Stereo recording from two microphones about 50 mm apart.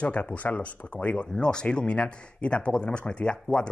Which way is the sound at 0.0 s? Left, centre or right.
Left.